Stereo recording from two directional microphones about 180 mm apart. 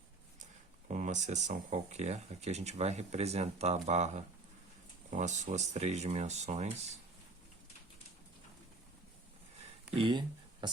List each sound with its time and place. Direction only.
0.9 s speech: 40° right (ahead or behind)
9.9 s speech: 30° right (ahead or behind)